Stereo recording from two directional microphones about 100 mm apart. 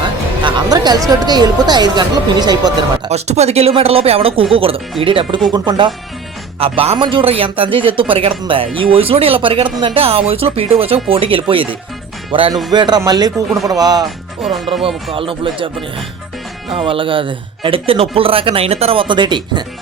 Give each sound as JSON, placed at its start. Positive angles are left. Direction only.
{"t": 0.4, "sound": "speech", "side_deg": -40}
{"t": 3.1, "sound": "speech", "side_deg": -90}
{"t": 6.6, "sound": "speech", "side_deg": -70}
{"t": 12.7, "sound": "speech", "side_deg": -45}
{"t": 14.4, "sound": "speech", "side_deg": 0}
{"t": 15.1, "sound": "speech", "side_deg": -65}
{"t": 16.7, "sound": "speech", "side_deg": -60}